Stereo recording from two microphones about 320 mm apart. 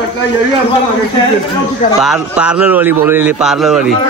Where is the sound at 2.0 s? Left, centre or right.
Centre.